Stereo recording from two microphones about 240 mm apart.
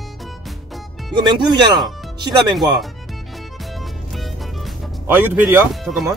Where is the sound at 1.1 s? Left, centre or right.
Centre.